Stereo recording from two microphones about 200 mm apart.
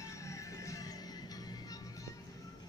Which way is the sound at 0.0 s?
15° left (ahead or behind).